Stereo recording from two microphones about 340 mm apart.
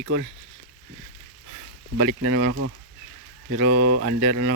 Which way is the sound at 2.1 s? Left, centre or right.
Right.